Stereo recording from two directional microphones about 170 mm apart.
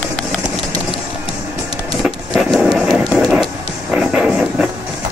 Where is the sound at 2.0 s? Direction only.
Centre (ahead or behind).